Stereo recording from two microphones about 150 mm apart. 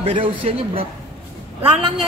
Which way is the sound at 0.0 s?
35° right (ahead or behind).